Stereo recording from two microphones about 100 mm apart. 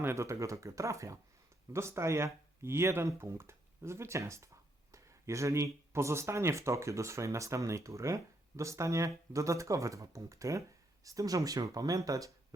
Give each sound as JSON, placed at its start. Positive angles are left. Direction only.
{"t": 0.0, "sound": "speech", "side_deg": -30}